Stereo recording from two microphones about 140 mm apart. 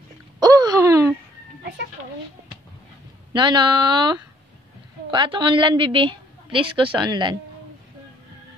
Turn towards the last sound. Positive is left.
turn(degrees=-30)  # may be behind; listen again after turning